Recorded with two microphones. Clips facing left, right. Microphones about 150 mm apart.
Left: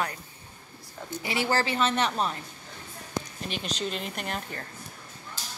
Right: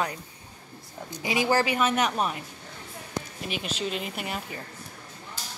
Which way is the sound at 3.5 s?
5° right (ahead or behind).